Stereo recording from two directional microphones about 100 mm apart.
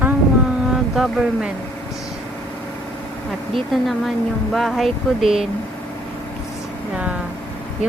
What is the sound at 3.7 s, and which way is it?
Speech, centre (ahead or behind).